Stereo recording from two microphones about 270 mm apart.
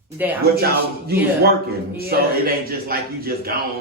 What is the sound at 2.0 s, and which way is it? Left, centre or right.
A man's voice, right.